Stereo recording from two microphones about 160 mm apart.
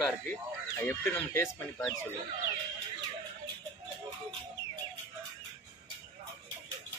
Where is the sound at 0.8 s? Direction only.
15° left (ahead or behind).